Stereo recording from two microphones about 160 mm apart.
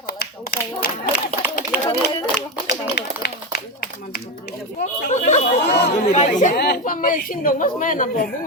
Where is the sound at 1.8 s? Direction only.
20° left (ahead or behind).